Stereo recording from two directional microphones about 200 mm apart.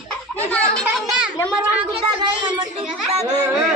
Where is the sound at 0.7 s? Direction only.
5° right (ahead or behind).